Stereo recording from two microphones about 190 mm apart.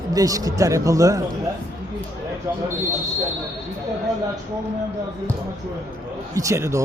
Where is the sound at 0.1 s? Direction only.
20° right (ahead or behind).